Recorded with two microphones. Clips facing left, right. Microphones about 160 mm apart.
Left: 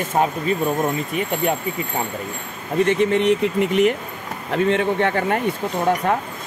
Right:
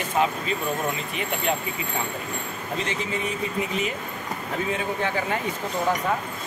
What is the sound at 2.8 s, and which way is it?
Speech, 65° left (ahead or behind).